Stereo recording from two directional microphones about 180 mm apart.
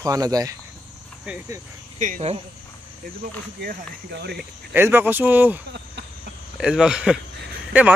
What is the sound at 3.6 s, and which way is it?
Speech, 65° right (ahead or behind).